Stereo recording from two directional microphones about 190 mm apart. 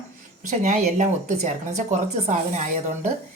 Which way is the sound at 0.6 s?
40° right (ahead or behind).